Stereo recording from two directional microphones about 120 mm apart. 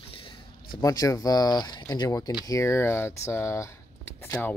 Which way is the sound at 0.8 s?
30° left (ahead or behind).